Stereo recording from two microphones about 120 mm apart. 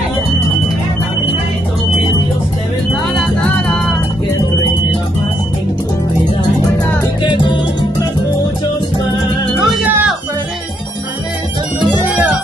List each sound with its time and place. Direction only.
3.2 s music: 5° left (ahead or behind)
7.2 s music: 40° left (ahead or behind)
9.6 s music: centre (ahead or behind)
12.0 s music: 15° right (ahead or behind)